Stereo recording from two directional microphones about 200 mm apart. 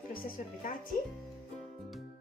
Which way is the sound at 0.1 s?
45° left (ahead or behind).